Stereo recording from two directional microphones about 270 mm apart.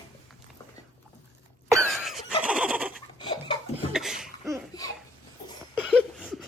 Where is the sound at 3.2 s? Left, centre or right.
Centre.